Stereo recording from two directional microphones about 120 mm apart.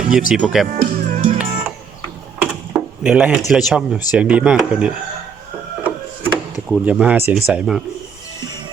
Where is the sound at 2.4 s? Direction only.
10° right (ahead or behind).